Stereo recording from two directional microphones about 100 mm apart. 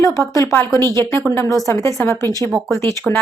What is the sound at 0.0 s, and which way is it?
A woman's voice, 35° left (ahead or behind).